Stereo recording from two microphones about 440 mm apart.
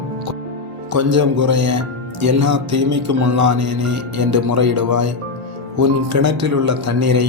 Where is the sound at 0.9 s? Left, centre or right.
Right.